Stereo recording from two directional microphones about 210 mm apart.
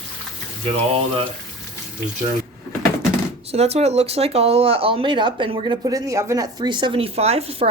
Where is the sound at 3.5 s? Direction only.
30° right (ahead or behind).